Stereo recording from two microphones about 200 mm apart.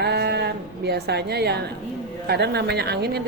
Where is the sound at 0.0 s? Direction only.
55° right (ahead or behind).